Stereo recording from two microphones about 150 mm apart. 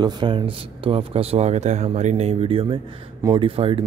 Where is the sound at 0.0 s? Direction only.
30° right (ahead or behind).